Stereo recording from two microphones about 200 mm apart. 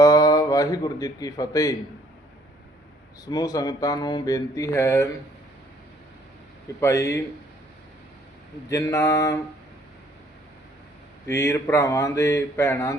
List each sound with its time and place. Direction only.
0.0 s speech: 20° left (ahead or behind)
3.2 s a sound: 20° left (ahead or behind)
6.7 s speech: 15° left (ahead or behind)
8.7 s speech: 15° left (ahead or behind)
11.3 s speech: 15° left (ahead or behind)